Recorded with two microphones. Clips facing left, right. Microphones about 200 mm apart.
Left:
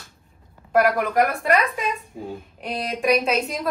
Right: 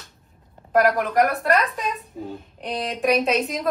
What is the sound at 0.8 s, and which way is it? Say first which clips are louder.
Speech: right 1 dB; centre (ahead or behind).